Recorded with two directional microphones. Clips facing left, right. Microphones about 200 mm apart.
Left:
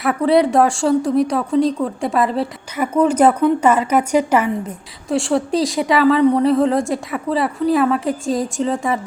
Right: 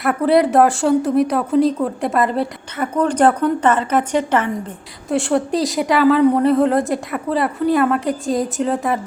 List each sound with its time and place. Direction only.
0.0 s speech: centre (ahead or behind)
5.0 s speech: centre (ahead or behind)